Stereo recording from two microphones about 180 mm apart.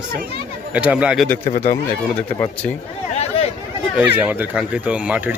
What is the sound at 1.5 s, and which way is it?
Speech, 45° left (ahead or behind).